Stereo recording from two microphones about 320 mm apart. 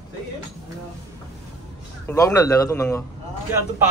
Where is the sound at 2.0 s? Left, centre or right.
Centre.